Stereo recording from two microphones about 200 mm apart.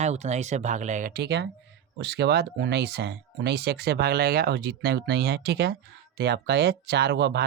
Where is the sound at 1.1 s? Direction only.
55° right (ahead or behind).